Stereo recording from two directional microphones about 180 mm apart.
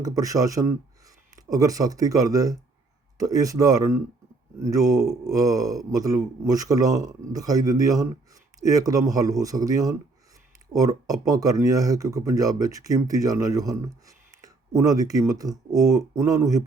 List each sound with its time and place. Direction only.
0.0 s speech: 20° right (ahead or behind)